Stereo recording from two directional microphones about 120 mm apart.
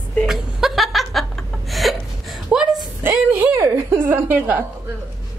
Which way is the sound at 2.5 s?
5° right (ahead or behind).